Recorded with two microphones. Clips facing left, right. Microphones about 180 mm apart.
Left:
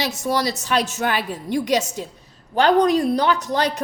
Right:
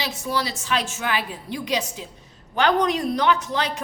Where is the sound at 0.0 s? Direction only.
45° left (ahead or behind).